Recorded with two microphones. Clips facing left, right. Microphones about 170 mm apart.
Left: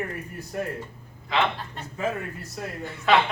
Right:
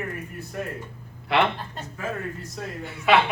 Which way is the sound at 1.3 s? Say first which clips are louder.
Right 3 dB; 70° right (ahead or behind).